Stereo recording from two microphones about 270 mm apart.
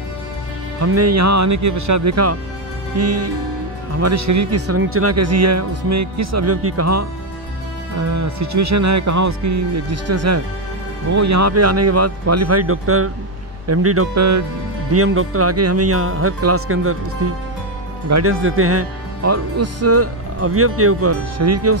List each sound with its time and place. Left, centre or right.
0.7 s speech: right
4.0 s speech: right
8.1 s speech: right
11.1 s speech: right
15.0 s speech: right